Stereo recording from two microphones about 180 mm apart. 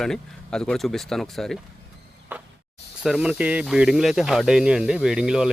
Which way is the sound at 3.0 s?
5° right (ahead or behind).